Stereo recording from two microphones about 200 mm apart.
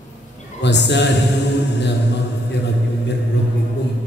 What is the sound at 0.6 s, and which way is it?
Speech, 60° left (ahead or behind).